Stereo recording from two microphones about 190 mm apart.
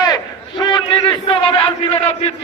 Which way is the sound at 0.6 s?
25° left (ahead or behind).